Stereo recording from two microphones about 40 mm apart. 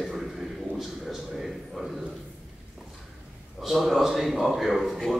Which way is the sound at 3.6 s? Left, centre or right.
Centre.